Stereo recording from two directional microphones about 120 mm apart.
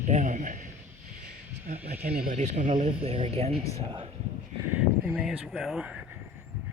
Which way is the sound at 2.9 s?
50° right (ahead or behind).